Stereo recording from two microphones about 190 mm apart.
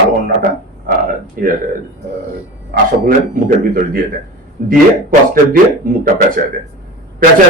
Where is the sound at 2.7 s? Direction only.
50° right (ahead or behind).